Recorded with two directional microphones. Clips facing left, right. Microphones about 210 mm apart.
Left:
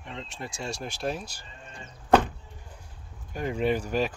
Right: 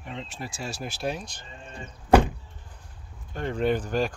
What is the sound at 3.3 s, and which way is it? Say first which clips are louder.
Speech: right 1 dB; 10° left (ahead or behind).